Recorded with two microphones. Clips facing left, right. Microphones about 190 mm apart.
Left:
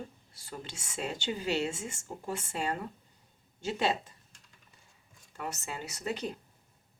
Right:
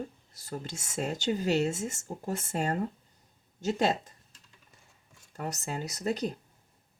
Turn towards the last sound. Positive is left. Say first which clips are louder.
# right 5 dB
turn(degrees=-40)  # may be behind; listen again after turning